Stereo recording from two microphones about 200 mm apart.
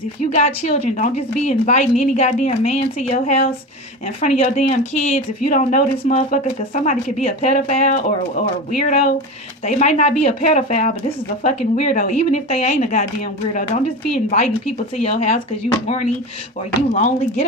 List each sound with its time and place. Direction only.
0.3 s speech: 35° left (ahead or behind)
16.9 s speech: 35° left (ahead or behind)